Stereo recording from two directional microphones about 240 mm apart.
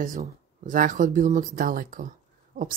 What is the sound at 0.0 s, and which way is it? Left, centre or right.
Speech, right.